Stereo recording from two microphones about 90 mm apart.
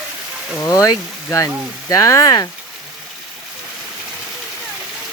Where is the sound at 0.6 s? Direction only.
40° left (ahead or behind).